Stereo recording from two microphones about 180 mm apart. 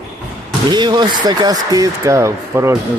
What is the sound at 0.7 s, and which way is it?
Speech, 25° right (ahead or behind).